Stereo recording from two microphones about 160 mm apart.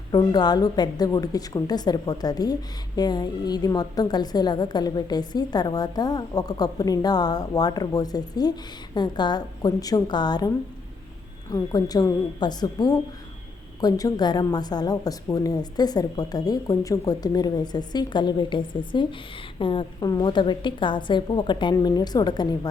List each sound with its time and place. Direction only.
0.1 s a woman's voice: 25° left (ahead or behind)
11.5 s a woman's voice: 25° left (ahead or behind)